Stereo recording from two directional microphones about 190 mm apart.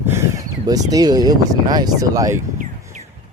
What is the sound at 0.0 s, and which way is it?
Speech, 15° right (ahead or behind).